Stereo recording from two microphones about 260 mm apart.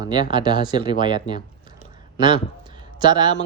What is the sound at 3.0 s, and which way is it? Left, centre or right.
Speech, centre.